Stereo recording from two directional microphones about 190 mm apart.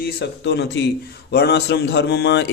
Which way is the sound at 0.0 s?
65° left (ahead or behind).